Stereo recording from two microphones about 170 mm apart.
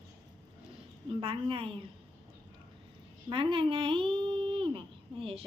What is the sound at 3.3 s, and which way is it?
Speech, 30° right (ahead or behind).